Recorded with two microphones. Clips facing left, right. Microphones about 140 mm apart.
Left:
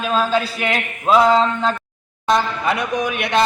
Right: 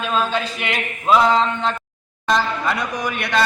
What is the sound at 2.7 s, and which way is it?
Speech, 20° left (ahead or behind).